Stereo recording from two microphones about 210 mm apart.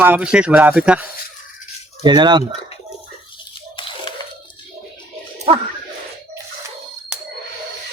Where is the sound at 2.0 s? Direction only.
20° right (ahead or behind).